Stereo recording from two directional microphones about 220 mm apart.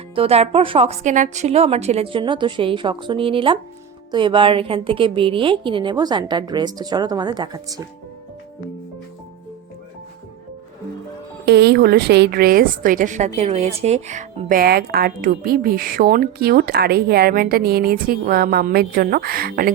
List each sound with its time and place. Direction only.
0.2 s a woman's voice: 25° right (ahead or behind)
11.4 s a woman's voice: 50° right (ahead or behind)